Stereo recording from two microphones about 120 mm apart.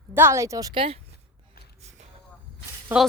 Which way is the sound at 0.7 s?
45° right (ahead or behind).